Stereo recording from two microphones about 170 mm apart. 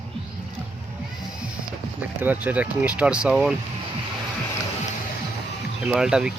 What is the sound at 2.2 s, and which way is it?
Speech, 10° right (ahead or behind).